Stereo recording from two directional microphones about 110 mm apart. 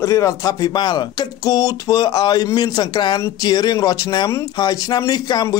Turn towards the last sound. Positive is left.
turn(degrees=35)  # may be behind; listen again after turning